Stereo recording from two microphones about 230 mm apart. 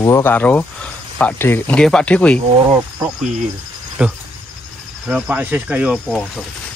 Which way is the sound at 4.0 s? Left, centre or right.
Centre.